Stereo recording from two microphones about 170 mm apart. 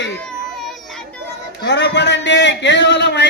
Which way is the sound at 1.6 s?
90° left.